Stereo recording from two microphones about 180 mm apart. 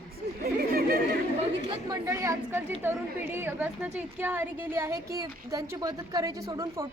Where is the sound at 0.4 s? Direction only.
55° right (ahead or behind).